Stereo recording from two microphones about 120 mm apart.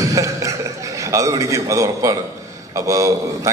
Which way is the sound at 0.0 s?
30° right (ahead or behind).